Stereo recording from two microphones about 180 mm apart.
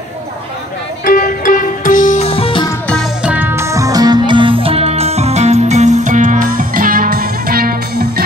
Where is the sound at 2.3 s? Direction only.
30° left (ahead or behind).